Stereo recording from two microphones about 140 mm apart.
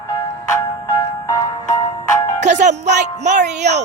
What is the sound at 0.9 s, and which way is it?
Music, 25° left (ahead or behind).